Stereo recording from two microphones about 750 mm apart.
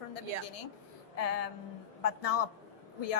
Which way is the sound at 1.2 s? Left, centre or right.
Left.